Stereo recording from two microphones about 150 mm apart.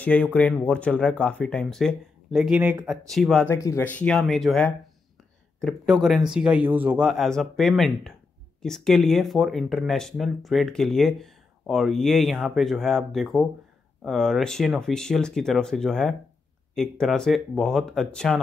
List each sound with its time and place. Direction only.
0.0 s speech: 10° left (ahead or behind)
3.4 s speech: 20° left (ahead or behind)
3.8 s speech: 10° left (ahead or behind)